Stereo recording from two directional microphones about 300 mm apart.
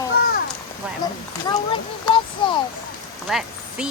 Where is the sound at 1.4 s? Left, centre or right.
Centre.